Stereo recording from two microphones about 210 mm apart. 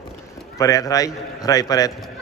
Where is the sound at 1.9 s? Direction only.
Centre (ahead or behind).